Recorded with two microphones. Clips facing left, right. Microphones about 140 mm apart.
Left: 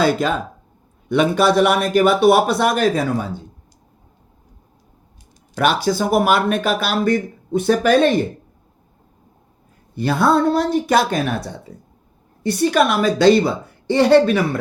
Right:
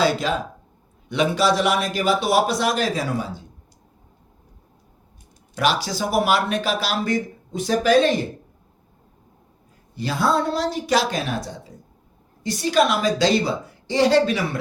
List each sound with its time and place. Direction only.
0.0 s a man's voice: 50° left (ahead or behind)
5.5 s speech: 55° left (ahead or behind)
9.9 s a man's voice: 55° left (ahead or behind)